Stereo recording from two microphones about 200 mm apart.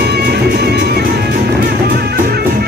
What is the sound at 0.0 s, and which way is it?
Music, 55° right (ahead or behind).